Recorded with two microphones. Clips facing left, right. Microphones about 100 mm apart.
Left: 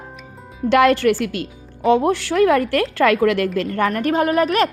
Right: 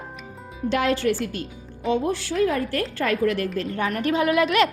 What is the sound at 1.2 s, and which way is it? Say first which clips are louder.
Speech: left 5 dB; 90° left.